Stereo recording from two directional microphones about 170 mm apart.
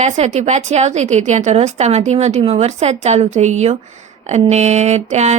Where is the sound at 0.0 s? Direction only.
40° right (ahead or behind).